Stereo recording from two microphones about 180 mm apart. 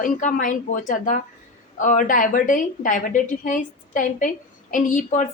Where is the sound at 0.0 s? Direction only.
45° left (ahead or behind).